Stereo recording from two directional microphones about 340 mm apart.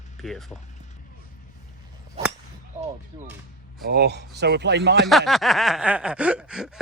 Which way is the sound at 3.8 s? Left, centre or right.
Right.